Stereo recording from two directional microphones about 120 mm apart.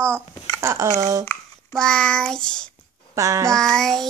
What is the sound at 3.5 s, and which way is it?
Child singing, 5° left (ahead or behind).